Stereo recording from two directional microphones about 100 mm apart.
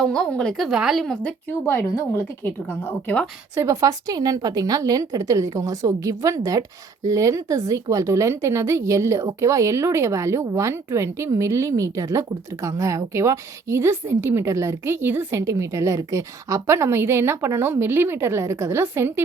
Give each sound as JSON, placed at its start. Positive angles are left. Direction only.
{"t": 0.0, "sound": "speech", "side_deg": 5}
{"t": 1.6, "sound": "a woman's voice", "side_deg": 20}
{"t": 3.5, "sound": "a woman's voice", "side_deg": -30}